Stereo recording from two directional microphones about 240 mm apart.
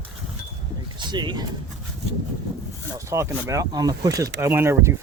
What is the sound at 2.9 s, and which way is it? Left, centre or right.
Speech, centre.